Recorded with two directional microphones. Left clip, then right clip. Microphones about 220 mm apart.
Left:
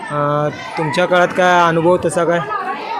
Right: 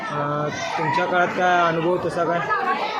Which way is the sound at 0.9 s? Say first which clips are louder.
Left 9 dB; 50° left (ahead or behind).